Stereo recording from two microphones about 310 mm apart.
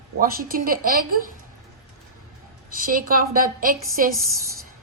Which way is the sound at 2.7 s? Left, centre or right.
Right.